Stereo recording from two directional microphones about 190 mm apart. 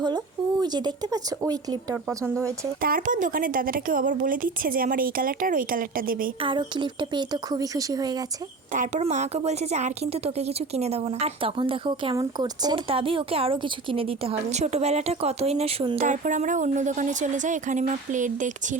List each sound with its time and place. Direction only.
0.6 s speech: 20° right (ahead or behind)
2.8 s speech: 45° right (ahead or behind)
6.4 s speech: 25° right (ahead or behind)
8.7 s a woman's voice: 40° right (ahead or behind)
16.0 s a woman's voice: 40° right (ahead or behind)